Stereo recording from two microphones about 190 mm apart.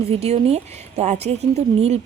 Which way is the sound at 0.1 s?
35° right (ahead or behind).